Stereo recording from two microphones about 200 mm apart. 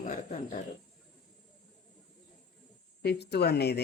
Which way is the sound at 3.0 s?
55° left (ahead or behind).